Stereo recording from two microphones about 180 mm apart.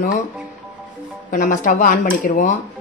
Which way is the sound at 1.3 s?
45° left (ahead or behind).